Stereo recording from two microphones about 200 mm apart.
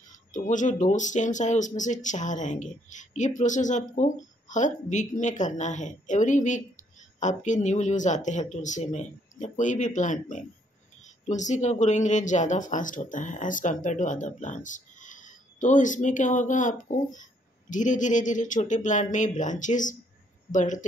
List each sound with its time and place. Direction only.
0.1 s speech: 40° left (ahead or behind)